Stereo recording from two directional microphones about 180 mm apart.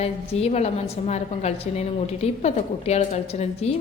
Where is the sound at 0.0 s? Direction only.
35° left (ahead or behind).